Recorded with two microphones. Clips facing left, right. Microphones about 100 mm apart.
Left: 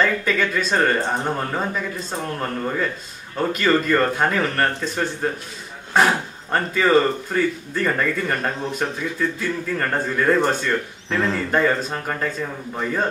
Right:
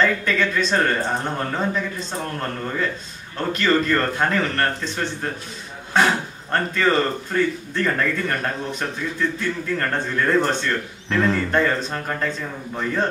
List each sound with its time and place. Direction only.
0.0 s a man's voice: 5° left (ahead or behind)